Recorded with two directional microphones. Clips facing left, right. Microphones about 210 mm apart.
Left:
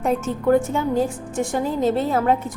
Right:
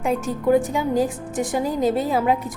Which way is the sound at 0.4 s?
10° right (ahead or behind).